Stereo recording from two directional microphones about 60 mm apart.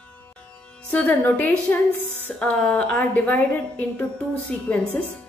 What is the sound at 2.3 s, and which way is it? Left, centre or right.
A woman's voice, centre.